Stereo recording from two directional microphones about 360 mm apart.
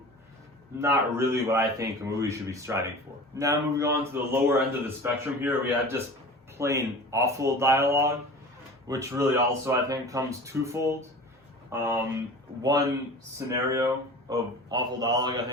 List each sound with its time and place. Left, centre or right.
0.8 s a man's voice: centre
13.7 s a man's voice: centre